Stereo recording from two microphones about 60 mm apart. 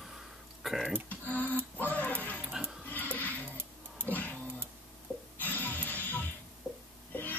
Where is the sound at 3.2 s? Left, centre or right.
Left.